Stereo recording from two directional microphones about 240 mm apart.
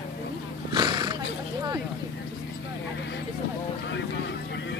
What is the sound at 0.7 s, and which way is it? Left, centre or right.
Wild animals, centre.